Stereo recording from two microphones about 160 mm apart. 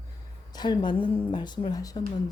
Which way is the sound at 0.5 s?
30° left (ahead or behind).